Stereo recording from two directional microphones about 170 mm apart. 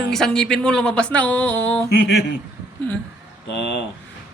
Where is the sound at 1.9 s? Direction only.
90° left.